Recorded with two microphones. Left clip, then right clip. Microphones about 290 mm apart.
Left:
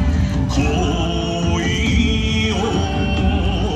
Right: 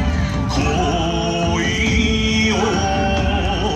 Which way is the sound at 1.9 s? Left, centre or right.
Right.